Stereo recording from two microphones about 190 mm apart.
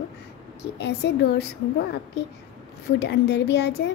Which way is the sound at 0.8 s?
60° left (ahead or behind).